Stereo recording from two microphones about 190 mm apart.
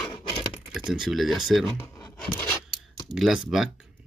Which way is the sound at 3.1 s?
Centre (ahead or behind).